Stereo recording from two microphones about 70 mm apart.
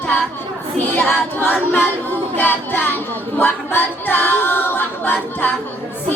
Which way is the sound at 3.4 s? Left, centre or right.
Left.